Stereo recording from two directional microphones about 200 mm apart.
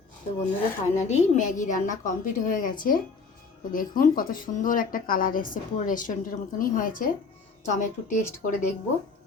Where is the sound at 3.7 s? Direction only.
45° left (ahead or behind).